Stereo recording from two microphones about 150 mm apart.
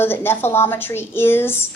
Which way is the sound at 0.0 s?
15° left (ahead or behind).